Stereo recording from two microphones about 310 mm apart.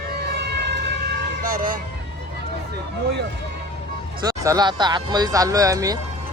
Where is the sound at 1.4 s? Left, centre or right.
Right.